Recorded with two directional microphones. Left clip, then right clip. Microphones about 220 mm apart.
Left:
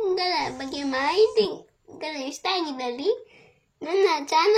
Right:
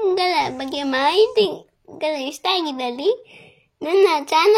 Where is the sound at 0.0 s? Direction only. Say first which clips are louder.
Right 6 dB; 40° right (ahead or behind).